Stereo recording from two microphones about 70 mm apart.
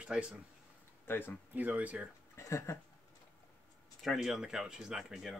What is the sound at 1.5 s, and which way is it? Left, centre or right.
Speech, right.